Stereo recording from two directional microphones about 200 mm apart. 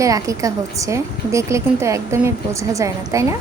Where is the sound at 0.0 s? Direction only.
15° right (ahead or behind).